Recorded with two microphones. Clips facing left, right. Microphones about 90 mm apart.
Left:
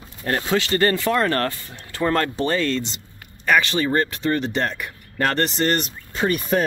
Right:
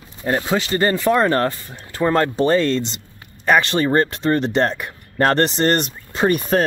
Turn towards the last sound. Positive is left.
turn(degrees=-45)  # may be behind; listen again after turning